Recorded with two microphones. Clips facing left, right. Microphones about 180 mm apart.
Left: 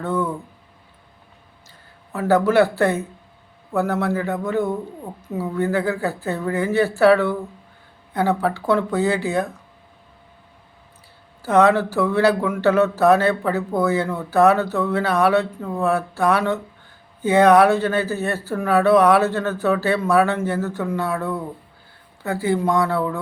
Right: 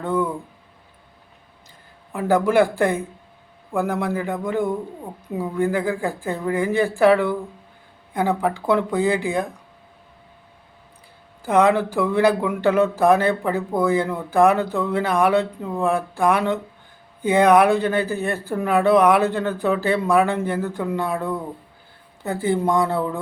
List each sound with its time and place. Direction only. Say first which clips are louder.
0.0 s speech: right 1 dB; 10° right (ahead or behind)
2.1 s speech: left 1 dB; 15° right (ahead or behind)
11.4 s speech: left 1 dB; 15° right (ahead or behind)